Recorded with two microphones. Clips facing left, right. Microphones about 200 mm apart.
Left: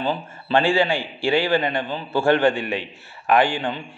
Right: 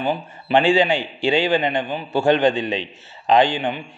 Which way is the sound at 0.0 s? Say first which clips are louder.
Right 2 dB; 15° right (ahead or behind).